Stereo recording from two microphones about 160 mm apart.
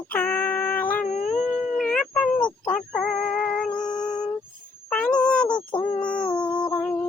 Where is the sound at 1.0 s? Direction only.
50° left (ahead or behind).